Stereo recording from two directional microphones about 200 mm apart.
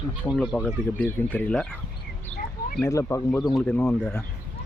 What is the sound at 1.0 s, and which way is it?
Speech, 10° left (ahead or behind).